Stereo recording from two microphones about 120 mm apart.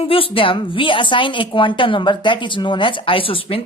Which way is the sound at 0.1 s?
50° left (ahead or behind).